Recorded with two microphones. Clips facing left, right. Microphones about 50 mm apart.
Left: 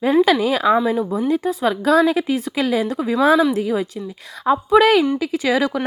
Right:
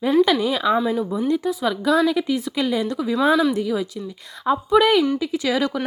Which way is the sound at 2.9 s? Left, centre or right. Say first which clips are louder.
Left 3 dB; left.